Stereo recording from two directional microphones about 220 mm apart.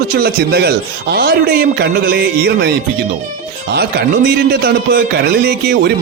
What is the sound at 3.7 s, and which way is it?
Speech, 45° right (ahead or behind).